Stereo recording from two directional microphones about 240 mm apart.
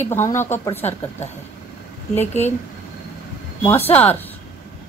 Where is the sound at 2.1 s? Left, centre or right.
Left.